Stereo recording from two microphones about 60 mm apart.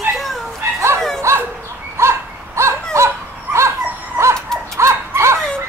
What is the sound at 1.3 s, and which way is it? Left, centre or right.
Dog, right.